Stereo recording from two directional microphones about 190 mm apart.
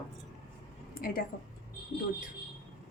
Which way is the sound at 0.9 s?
50° left (ahead or behind).